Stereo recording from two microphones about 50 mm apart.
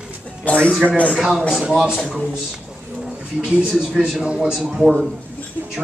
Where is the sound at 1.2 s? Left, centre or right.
Centre.